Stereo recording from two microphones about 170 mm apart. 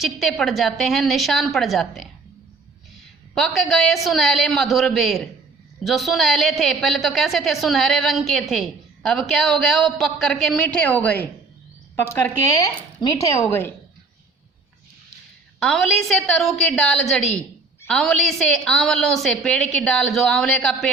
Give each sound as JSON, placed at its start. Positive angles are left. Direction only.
{"t": 0.0, "sound": "a woman's voice", "side_deg": 0}
{"t": 3.3, "sound": "a woman's voice", "side_deg": 0}
{"t": 15.6, "sound": "a woman's voice", "side_deg": 0}